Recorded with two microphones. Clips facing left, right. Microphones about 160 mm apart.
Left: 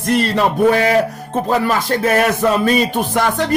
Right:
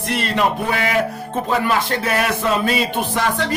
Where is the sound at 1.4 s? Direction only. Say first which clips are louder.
Left 2 dB; 40° left (ahead or behind).